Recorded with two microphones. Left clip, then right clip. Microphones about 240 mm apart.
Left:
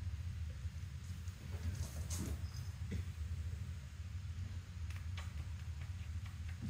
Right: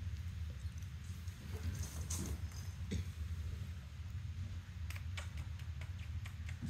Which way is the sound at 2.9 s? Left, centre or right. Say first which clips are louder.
Right 4 dB; right.